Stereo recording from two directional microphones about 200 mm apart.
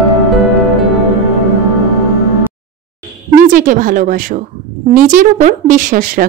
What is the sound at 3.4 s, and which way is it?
A woman's voice, 40° right (ahead or behind).